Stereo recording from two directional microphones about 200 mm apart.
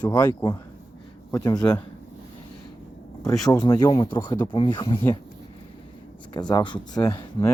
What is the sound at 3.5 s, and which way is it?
Speech, 20° left (ahead or behind).